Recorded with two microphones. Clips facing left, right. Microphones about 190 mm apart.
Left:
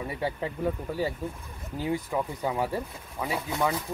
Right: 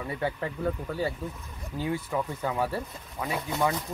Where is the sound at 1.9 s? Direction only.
15° left (ahead or behind).